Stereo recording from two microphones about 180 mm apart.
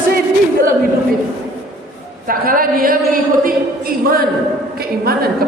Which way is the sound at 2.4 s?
50° right (ahead or behind).